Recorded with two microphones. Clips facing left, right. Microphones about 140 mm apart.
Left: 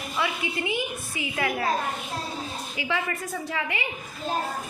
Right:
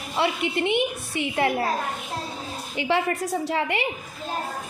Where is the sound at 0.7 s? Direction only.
70° right (ahead or behind).